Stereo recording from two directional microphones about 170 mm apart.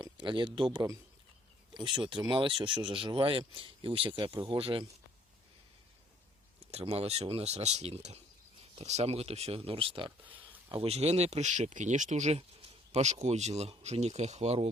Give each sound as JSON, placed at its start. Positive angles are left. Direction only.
{"t": 0.0, "sound": "speech", "side_deg": -30}
{"t": 6.7, "sound": "speech", "side_deg": -35}
{"t": 10.2, "sound": "a sound", "side_deg": -10}
{"t": 10.7, "sound": "speech", "side_deg": -35}